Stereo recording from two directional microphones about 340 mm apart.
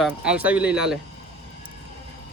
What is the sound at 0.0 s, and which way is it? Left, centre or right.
Speech, centre.